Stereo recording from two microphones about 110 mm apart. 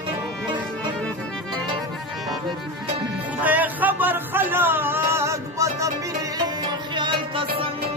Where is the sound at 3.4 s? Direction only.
15° right (ahead or behind); by 7.7 s 55° right (ahead or behind).